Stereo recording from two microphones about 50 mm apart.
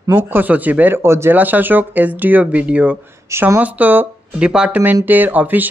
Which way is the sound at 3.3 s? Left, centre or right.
Right.